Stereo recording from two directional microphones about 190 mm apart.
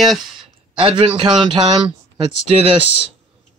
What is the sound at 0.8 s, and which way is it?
A man's voice, 25° right (ahead or behind).